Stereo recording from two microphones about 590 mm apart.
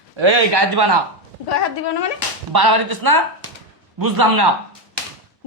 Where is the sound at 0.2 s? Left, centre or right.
Right.